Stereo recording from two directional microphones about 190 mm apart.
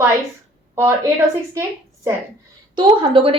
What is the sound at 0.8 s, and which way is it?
Speech, 15° right (ahead or behind).